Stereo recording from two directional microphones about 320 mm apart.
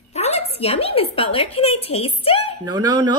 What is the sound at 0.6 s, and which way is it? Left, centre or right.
A woman's voice, centre.